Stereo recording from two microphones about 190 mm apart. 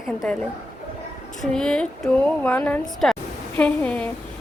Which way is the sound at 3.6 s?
5° left (ahead or behind).